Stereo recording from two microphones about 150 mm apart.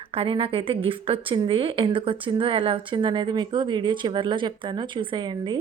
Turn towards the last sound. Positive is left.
turn(degrees=-30)  # may be behind; listen again after turning